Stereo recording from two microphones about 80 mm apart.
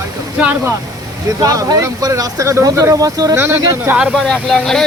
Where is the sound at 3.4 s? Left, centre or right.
Right.